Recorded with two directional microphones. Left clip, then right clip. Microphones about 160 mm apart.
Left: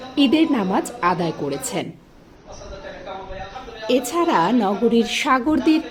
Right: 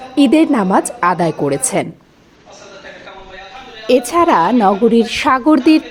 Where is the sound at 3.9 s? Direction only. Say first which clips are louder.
Right 8 dB; 35° right (ahead or behind).